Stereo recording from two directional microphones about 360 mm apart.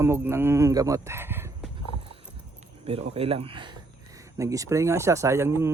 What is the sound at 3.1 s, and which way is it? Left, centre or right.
Speech, centre.